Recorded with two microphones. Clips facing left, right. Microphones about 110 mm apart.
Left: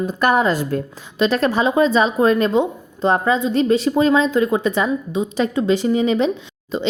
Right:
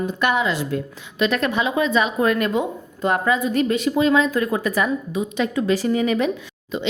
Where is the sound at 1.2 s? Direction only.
30° left (ahead or behind).